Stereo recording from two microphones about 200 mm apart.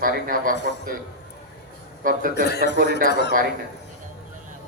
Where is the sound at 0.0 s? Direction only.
45° right (ahead or behind).